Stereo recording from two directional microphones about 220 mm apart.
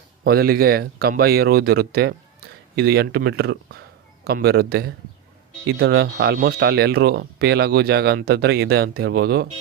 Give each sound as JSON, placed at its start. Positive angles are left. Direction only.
{"t": 0.3, "sound": "speech", "side_deg": -45}